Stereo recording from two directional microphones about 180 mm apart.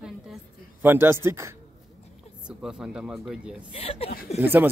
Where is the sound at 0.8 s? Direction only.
10° right (ahead or behind).